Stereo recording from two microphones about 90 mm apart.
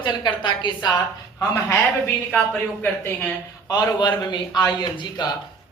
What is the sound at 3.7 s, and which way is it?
A woman's voice, 50° left (ahead or behind).